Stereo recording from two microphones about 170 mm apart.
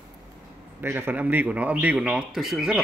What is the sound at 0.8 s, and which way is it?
A man's voice, 15° right (ahead or behind).